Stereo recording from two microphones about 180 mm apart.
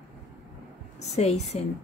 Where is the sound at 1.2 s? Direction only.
35° left (ahead or behind).